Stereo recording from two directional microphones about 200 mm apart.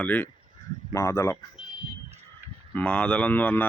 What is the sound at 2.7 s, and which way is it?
Speech, 5° left (ahead or behind).